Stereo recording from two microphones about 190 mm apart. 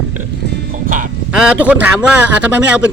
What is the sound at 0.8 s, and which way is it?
Quack, 45° right (ahead or behind).